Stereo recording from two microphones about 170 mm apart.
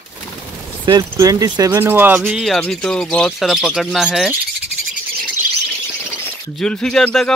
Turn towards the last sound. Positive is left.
turn(degrees=5)  # may be behind; listen again after turning